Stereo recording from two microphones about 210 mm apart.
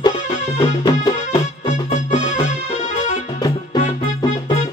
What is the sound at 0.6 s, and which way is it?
Music, 20° left (ahead or behind).